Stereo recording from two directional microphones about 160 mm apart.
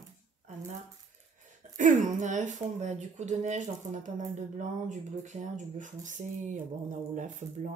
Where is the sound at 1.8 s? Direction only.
50° right (ahead or behind).